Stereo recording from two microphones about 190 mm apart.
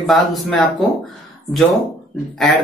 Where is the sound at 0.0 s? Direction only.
Centre (ahead or behind).